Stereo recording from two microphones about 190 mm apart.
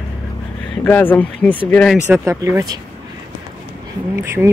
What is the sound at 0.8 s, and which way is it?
Speech, 10° left (ahead or behind).